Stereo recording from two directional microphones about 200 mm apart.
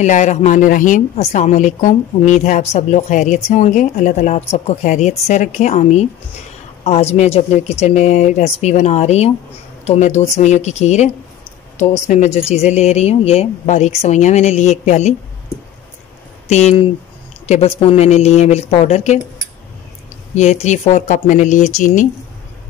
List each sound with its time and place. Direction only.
0.0 s a woman's voice: 35° left (ahead or behind)
12.1 s a woman's voice: 35° left (ahead or behind)
16.4 s a woman's voice: 35° left (ahead or behind)
20.3 s a woman's voice: 35° left (ahead or behind)